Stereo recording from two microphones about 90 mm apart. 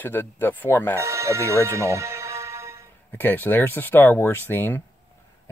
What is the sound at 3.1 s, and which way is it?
Speech, 20° left (ahead or behind).